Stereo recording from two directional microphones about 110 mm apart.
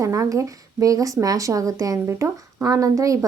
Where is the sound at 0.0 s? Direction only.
30° right (ahead or behind).